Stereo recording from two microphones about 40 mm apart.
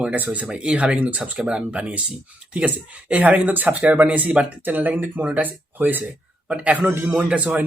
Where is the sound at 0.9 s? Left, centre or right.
Right.